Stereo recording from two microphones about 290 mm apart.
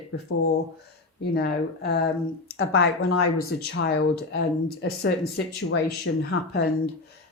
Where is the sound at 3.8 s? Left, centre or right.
Left.